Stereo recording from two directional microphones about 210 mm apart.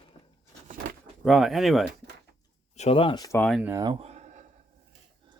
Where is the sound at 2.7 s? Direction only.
30° left (ahead or behind).